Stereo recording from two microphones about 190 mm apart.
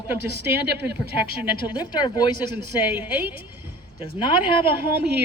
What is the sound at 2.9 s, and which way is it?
Speech, 10° right (ahead or behind).